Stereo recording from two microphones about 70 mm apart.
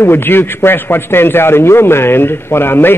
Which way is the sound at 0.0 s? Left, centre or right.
Left.